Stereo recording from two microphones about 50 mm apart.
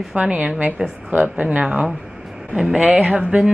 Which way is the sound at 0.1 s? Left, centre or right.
Right.